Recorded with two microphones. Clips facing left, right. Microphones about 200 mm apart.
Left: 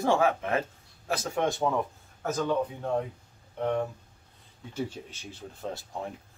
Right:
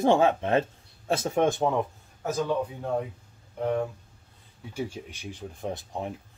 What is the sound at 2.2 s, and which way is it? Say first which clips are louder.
Speech: right 1 dB; 10° right (ahead or behind).